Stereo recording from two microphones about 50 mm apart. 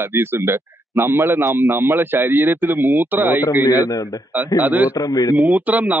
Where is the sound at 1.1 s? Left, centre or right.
Right.